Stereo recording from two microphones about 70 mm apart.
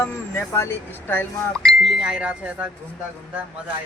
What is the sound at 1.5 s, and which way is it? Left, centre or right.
Speech, centre.